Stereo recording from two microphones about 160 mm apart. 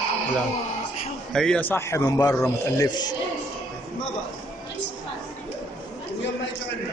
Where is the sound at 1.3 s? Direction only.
5° left (ahead or behind); by 3.2 s 25° left (ahead or behind).